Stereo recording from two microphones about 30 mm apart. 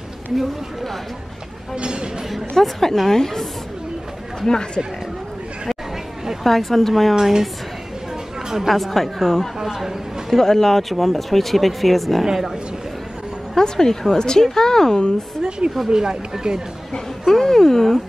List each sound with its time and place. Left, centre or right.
1.8 s speech: right
2.6 s a woman's voice: centre
6.4 s a woman's voice: centre
7.2 s a woman's voice: centre
8.6 s a woman's voice: centre
13.6 s a woman's voice: centre
15.9 s speech: right
17.3 s a woman's voice: centre